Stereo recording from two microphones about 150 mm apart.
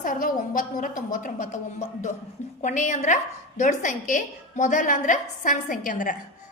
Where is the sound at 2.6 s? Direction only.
55° left (ahead or behind).